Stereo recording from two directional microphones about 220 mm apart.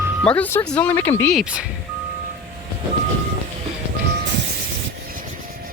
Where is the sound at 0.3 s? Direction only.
10° left (ahead or behind).